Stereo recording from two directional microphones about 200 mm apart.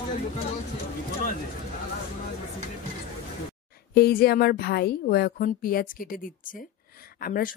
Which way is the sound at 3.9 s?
50° left (ahead or behind).